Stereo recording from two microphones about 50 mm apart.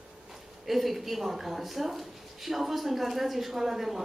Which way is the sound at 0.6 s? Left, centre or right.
Centre.